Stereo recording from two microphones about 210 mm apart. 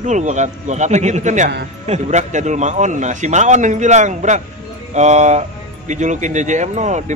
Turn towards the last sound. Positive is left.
turn(degrees=-35)  # may be behind; listen again after turning